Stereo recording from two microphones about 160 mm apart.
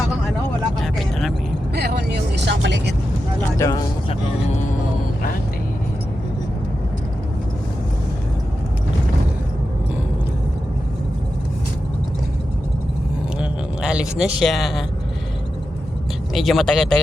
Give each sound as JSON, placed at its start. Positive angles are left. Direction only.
{"t": 0.8, "sound": "vehicle", "side_deg": 0}
{"t": 1.7, "sound": "vehicle", "side_deg": -85}
{"t": 3.6, "sound": "speech", "side_deg": 20}
{"t": 13.4, "sound": "a sound", "side_deg": -5}
{"t": 16.3, "sound": "speech", "side_deg": 0}